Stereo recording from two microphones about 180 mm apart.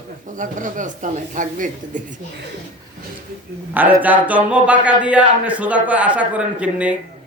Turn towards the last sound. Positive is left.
turn(degrees=-5)  # may be behind; listen again after turning